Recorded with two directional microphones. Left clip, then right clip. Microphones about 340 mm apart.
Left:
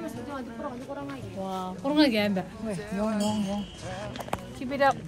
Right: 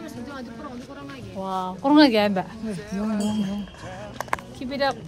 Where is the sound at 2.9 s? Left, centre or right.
Centre.